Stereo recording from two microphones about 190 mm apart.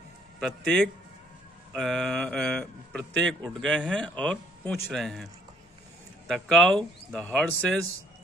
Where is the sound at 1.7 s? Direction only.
Centre (ahead or behind).